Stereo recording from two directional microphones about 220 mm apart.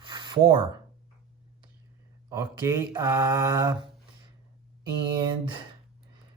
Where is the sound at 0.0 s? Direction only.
20° right (ahead or behind).